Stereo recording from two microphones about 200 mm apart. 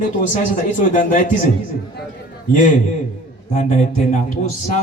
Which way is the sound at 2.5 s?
40° left (ahead or behind).